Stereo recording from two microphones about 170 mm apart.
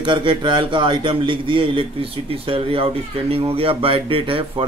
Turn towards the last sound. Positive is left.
turn(degrees=-30)  # may be behind; listen again after turning